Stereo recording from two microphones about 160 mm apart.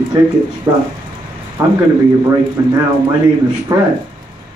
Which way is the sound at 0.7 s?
20° right (ahead or behind).